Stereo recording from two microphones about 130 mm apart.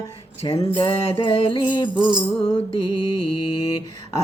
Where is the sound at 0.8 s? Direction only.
35° left (ahead or behind).